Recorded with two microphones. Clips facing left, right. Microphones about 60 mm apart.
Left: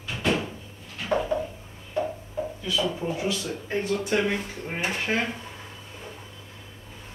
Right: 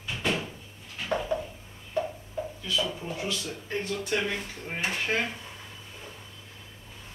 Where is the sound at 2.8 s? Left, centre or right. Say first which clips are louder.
Left 6 dB; centre.